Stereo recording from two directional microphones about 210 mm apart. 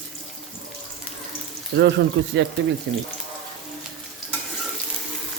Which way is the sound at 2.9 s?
55° right (ahead or behind).